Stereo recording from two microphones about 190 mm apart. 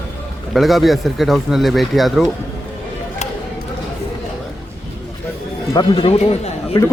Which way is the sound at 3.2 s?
35° left (ahead or behind).